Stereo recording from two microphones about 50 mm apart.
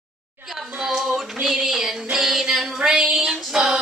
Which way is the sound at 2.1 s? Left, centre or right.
Centre.